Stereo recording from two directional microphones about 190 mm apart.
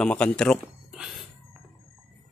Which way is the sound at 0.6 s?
5° right (ahead or behind).